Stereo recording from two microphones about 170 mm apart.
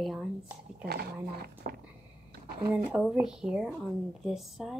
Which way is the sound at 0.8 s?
65° right (ahead or behind).